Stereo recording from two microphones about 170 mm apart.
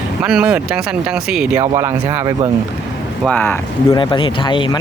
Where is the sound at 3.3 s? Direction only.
10° left (ahead or behind).